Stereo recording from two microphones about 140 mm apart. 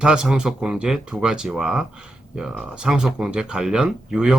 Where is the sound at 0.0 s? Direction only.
5° right (ahead or behind).